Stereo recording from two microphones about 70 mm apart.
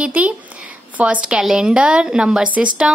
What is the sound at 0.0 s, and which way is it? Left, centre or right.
A woman's voice, right.